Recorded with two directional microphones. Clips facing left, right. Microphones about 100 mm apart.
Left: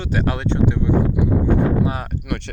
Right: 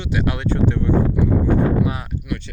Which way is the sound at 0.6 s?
15° left (ahead or behind).